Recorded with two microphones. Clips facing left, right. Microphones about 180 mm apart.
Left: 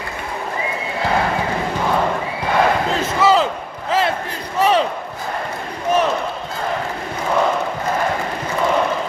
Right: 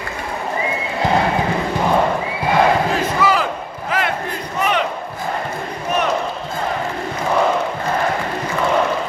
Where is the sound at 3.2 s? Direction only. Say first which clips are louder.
Left 4 dB; 25° left (ahead or behind).